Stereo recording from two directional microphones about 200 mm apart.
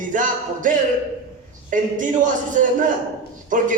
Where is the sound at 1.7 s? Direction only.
40° right (ahead or behind).